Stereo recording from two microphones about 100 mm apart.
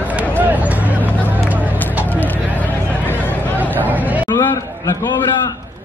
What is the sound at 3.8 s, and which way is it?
Chatter, 15° right (ahead or behind).